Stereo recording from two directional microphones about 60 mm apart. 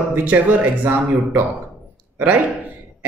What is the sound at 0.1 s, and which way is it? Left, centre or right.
A man's voice, right.